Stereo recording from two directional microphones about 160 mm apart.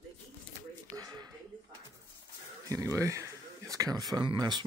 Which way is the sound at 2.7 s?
20° right (ahead or behind).